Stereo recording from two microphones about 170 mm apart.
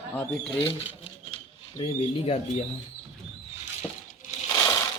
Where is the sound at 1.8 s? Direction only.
35° left (ahead or behind).